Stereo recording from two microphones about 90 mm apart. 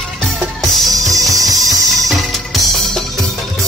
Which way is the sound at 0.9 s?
40° right (ahead or behind).